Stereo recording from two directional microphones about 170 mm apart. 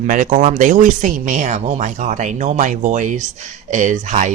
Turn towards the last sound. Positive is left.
turn(degrees=-50)  # may be behind; listen again after turning